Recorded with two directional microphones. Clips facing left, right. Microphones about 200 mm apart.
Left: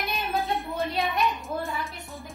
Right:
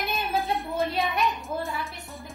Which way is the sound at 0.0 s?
Centre (ahead or behind).